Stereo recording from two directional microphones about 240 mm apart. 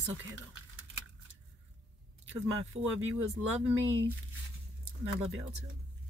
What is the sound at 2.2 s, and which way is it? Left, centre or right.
Speech, right.